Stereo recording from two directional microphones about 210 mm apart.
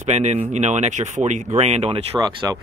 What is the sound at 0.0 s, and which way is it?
Speech, 30° right (ahead or behind).